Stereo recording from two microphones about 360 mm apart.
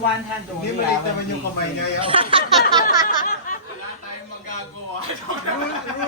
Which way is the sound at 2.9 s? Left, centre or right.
Left.